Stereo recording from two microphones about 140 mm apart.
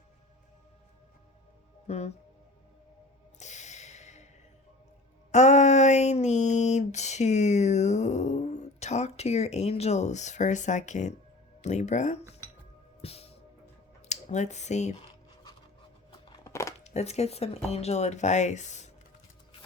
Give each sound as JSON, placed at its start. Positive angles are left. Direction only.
{"t": 1.9, "sound": "speech", "side_deg": 50}
{"t": 3.3, "sound": "snort", "side_deg": 55}
{"t": 5.3, "sound": "a sound", "side_deg": 55}
{"t": 11.6, "sound": "speech", "side_deg": 55}
{"t": 13.0, "sound": "music", "side_deg": 45}
{"t": 14.1, "sound": "speech", "side_deg": 55}
{"t": 16.4, "sound": "a sound", "side_deg": 20}
{"t": 16.8, "sound": "speech", "side_deg": 50}